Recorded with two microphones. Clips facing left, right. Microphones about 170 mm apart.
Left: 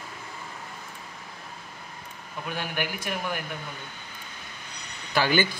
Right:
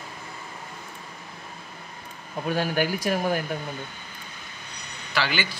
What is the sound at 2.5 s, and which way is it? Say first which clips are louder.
Speech: right 7 dB; 35° right (ahead or behind).